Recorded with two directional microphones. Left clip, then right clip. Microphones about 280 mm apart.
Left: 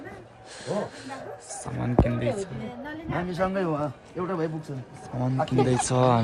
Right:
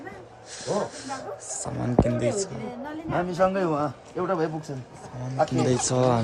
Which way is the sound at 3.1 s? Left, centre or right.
Right.